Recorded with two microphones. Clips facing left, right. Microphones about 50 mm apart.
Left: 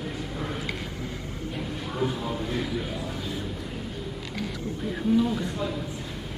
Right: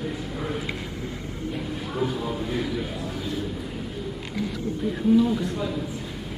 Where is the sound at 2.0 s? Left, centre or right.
Centre.